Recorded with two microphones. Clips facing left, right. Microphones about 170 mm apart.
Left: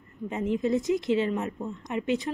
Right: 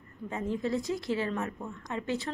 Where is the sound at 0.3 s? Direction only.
20° left (ahead or behind).